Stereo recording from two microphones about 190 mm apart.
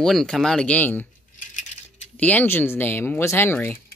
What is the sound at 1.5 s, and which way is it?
Coin, 40° left (ahead or behind).